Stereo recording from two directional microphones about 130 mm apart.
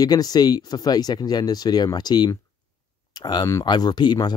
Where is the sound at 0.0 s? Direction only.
30° left (ahead or behind).